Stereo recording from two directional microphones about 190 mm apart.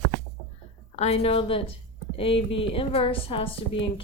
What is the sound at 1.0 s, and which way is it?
A woman's voice, 30° left (ahead or behind).